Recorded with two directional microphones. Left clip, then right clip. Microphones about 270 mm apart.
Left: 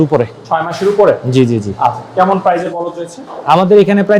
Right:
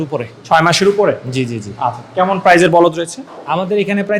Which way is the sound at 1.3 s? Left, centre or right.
Left.